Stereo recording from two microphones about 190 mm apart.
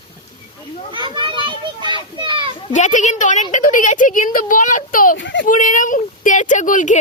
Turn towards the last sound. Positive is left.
turn(degrees=45)  # may be behind; listen again after turning